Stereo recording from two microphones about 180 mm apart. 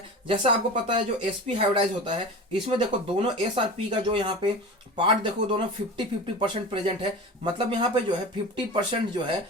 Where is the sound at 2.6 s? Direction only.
30° right (ahead or behind).